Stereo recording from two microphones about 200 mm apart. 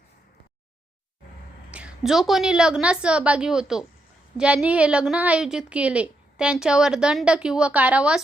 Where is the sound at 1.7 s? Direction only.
5° right (ahead or behind).